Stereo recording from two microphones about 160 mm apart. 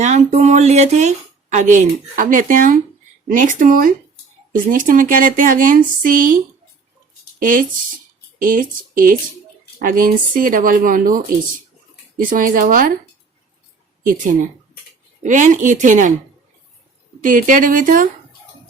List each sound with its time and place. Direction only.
0.0 s speech: 45° right (ahead or behind)
15.2 s speech: 50° right (ahead or behind)
17.2 s speech: 55° right (ahead or behind)